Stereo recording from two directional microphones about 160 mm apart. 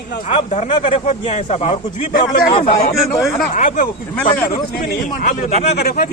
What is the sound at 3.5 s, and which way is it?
Speech, 55° left (ahead or behind).